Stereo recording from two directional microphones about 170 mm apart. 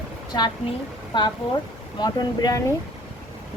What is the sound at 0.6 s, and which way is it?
A woman's voice, 35° left (ahead or behind).